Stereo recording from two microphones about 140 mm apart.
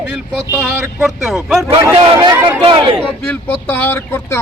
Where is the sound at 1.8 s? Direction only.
30° right (ahead or behind).